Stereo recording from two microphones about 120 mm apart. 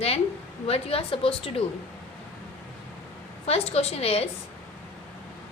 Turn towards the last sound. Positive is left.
turn(degrees=55)  # may be behind; listen again after turning